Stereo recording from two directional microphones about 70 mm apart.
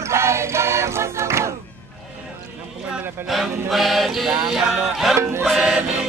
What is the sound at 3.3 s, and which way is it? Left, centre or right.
Music, centre.